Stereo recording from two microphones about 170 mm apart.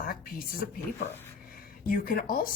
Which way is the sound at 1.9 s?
60° left (ahead or behind).